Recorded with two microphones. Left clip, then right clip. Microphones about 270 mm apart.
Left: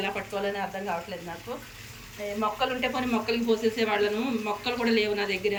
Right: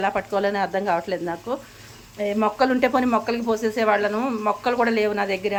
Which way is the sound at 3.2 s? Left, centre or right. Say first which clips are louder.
Right 2 dB; centre.